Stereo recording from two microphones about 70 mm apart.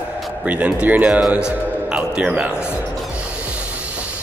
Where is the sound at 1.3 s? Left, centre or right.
Centre.